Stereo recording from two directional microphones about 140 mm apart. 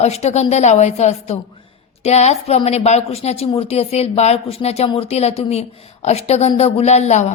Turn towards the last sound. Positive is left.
turn(degrees=55)  # may be behind; listen again after turning